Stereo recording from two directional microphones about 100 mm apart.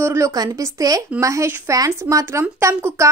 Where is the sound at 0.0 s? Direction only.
30° right (ahead or behind).